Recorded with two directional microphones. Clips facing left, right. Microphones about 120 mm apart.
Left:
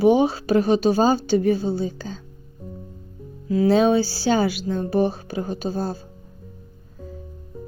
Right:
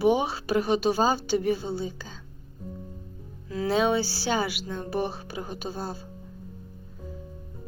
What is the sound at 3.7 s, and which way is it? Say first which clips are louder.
A woman's voice: left 6 dB; 30° left (ahead or behind).